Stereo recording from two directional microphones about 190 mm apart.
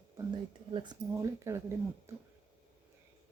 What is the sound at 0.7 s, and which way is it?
Speech, 20° right (ahead or behind).